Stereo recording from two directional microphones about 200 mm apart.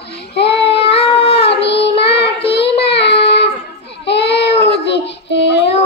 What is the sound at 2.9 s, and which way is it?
Child singing, 60° left (ahead or behind).